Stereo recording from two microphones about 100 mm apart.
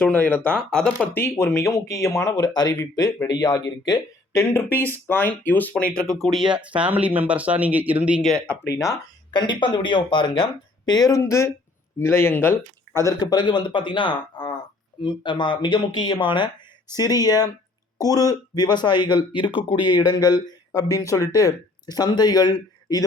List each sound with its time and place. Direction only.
0.0 s speech: 15° left (ahead or behind)
1.0 s speech: 20° left (ahead or behind); by 4.4 s 40° left (ahead or behind)
4.4 s speech: 20° left (ahead or behind)
6.0 s speech: centre (ahead or behind); by 8.2 s 15° right (ahead or behind)
8.2 s speech: centre (ahead or behind)
8.7 s speech: 35° left (ahead or behind)
9.3 s speech: 55° left (ahead or behind)
10.9 s speech: 40° left (ahead or behind)
11.2 s speech: 30° left (ahead or behind)
13.1 s speech: 45° left (ahead or behind)
16.9 s speech: 40° left (ahead or behind)